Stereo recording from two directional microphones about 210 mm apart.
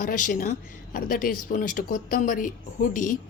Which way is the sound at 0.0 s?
40° left (ahead or behind).